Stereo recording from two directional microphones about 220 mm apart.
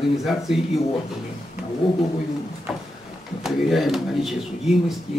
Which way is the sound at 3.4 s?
Centre (ahead or behind).